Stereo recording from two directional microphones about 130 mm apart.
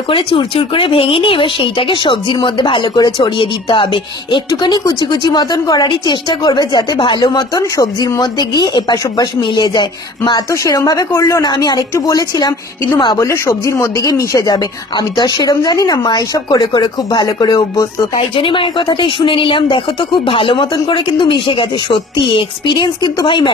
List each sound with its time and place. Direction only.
0.1 s speech: 45° left (ahead or behind)
4.5 s speech: 30° left (ahead or behind)
10.5 s a woman's voice: 25° left (ahead or behind)